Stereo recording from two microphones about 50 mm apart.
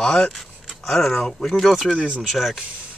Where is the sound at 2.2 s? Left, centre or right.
Centre.